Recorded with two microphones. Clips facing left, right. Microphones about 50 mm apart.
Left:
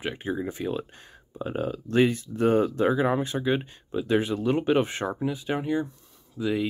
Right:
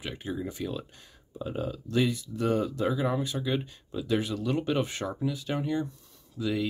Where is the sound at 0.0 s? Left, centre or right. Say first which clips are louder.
Left 5 dB; left.